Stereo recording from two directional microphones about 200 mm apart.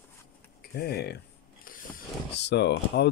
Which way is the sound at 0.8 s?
55° left (ahead or behind).